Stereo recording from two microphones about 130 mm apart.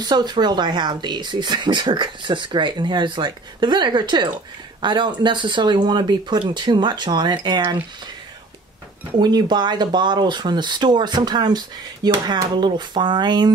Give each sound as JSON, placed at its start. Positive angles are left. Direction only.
{"t": 0.0, "sound": "speech", "side_deg": -35}
{"t": 9.2, "sound": "speech", "side_deg": -35}